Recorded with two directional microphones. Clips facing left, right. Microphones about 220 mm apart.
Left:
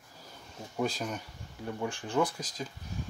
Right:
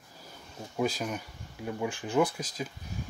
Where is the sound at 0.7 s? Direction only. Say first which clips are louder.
Right 2 dB; centre (ahead or behind).